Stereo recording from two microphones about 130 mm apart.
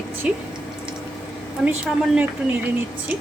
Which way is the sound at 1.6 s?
5° right (ahead or behind).